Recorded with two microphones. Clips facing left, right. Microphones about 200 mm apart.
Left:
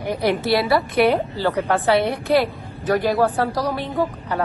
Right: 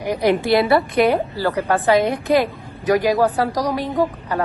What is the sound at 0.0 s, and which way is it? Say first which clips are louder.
A woman's voice: right 3 dB; 15° right (ahead or behind).